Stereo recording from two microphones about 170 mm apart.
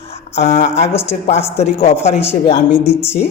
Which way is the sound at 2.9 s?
15° left (ahead or behind).